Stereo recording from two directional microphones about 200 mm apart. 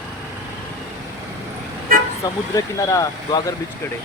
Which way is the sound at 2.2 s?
15° left (ahead or behind).